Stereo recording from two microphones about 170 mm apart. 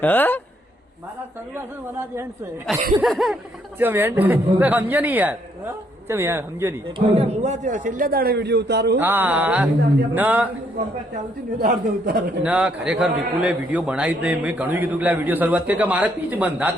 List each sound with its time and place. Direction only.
0.0 s a man's voice: 10° left (ahead or behind)
1.5 s a man's voice: 15° right (ahead or behind)
2.7 s a sound: centre (ahead or behind)
3.8 s a man's voice: 10° right (ahead or behind)
7.0 s a man's voice: 40° right (ahead or behind); by 9.0 s 80° right
9.0 s a man's voice: 10° right (ahead or behind)
11.6 s a man's voice: 55° right (ahead or behind)
12.4 s a man's voice: 10° right (ahead or behind)